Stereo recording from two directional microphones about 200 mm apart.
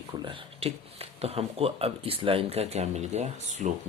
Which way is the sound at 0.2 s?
25° right (ahead or behind).